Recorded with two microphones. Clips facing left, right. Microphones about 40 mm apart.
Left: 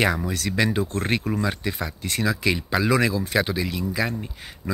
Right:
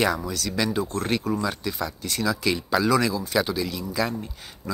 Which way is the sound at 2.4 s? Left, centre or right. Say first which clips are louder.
Right 1 dB; centre.